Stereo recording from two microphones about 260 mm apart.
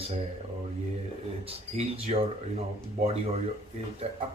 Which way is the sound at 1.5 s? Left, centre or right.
Right.